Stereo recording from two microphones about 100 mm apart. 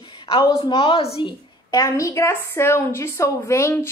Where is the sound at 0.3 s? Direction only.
55° left (ahead or behind).